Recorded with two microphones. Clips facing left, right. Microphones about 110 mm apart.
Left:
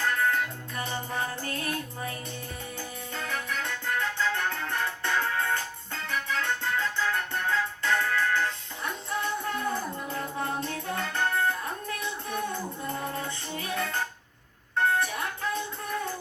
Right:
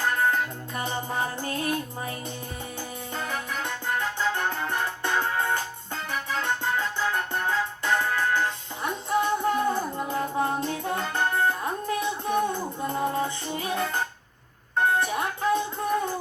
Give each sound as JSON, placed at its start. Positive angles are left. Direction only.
{"t": 0.0, "sound": "music", "side_deg": -30}
{"t": 3.2, "sound": "keyboard", "side_deg": -20}
{"t": 10.0, "sound": "music", "side_deg": -25}